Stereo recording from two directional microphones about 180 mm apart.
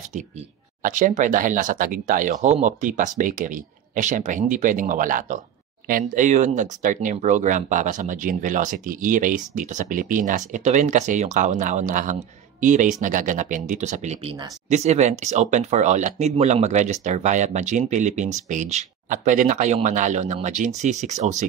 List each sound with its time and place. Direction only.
0.8 s speech: 45° right (ahead or behind)